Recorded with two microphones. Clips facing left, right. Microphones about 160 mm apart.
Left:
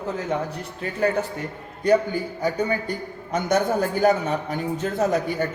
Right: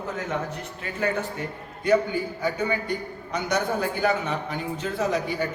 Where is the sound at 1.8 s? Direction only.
40° left (ahead or behind).